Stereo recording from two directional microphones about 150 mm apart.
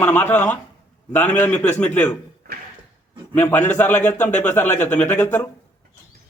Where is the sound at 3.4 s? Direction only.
10° left (ahead or behind).